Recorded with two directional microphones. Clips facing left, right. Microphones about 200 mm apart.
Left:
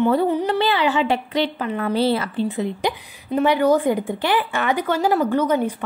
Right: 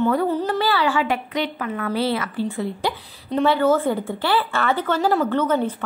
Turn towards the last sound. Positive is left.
turn(degrees=10)  # may be behind; listen again after turning